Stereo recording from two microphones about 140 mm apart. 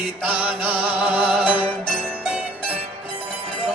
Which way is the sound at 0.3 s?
10° right (ahead or behind).